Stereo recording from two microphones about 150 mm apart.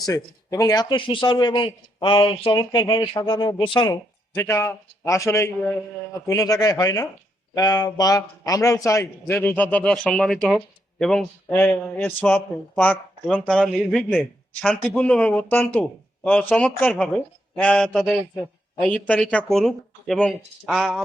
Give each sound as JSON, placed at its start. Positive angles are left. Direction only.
{"t": 0.0, "sound": "speech", "side_deg": 25}
{"t": 4.4, "sound": "a man's voice", "side_deg": 20}